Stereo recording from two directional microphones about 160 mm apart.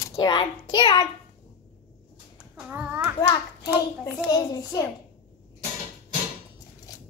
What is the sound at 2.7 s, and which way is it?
Speech, 10° right (ahead or behind).